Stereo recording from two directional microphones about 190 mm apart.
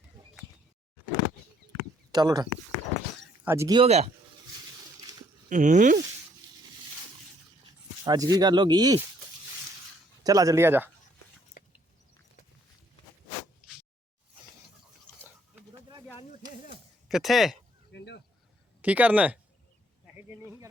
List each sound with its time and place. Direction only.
2.1 s speech: 20° right (ahead or behind)
3.8 s speech: 35° right (ahead or behind)
5.5 s speech: 40° right (ahead or behind)
8.0 s speech: 20° right (ahead or behind)
10.2 s speech: 20° right (ahead or behind)
11.6 s a sound: 40° left (ahead or behind)
17.1 s speech: centre (ahead or behind)
17.9 s a sound: 65° left (ahead or behind)
18.8 s speech: 10° right (ahead or behind)